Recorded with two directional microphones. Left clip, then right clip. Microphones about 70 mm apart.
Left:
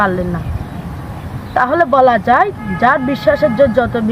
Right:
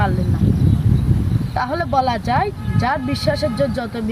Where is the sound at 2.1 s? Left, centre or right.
Right.